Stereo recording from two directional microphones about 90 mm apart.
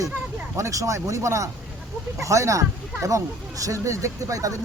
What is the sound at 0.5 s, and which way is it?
Speech, 35° right (ahead or behind).